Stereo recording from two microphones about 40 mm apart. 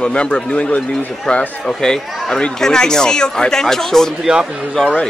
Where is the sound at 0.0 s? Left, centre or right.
Left.